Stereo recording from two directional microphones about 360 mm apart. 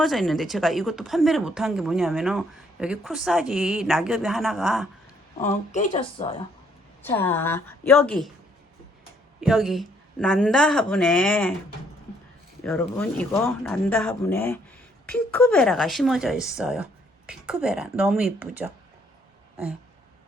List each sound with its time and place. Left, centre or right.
0.0 s speech: centre
5.7 s speech: centre
7.0 s speech: centre
9.4 s speech: centre
12.6 s speech: centre